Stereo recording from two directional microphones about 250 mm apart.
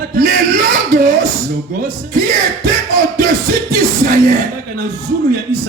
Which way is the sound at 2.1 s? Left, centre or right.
Right.